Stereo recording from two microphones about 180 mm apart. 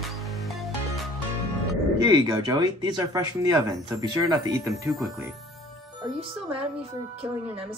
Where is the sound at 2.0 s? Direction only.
20° right (ahead or behind).